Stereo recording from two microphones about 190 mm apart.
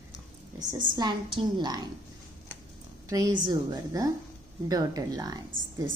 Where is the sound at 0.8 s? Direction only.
25° right (ahead or behind).